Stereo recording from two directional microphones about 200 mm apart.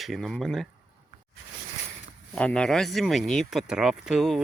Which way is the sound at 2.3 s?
5° left (ahead or behind).